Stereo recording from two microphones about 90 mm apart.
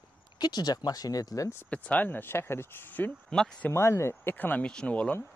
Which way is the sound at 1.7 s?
15° left (ahead or behind).